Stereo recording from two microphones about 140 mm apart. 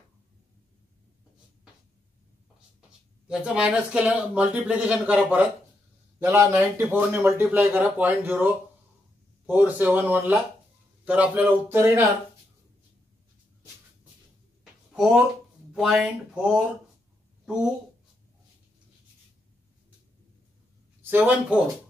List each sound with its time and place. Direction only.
3.3 s speech: 5° right (ahead or behind)
6.1 s a man's voice: 20° right (ahead or behind)
9.5 s speech: 10° right (ahead or behind)
15.7 s speech: 5° right (ahead or behind)
21.0 s speech: 15° right (ahead or behind)